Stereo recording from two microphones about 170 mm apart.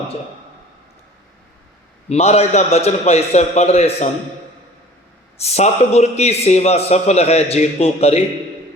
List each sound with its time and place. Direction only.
2.0 s a man's voice: 40° left (ahead or behind)
5.4 s a man's voice: 40° left (ahead or behind)